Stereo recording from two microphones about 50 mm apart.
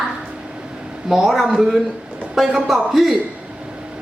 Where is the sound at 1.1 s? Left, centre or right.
Centre.